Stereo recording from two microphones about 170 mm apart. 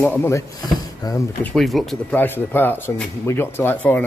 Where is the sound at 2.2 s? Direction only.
10° left (ahead or behind).